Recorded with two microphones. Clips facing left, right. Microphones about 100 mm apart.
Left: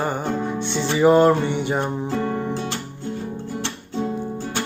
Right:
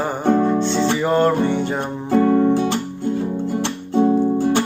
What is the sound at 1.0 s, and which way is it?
Music, 15° left (ahead or behind).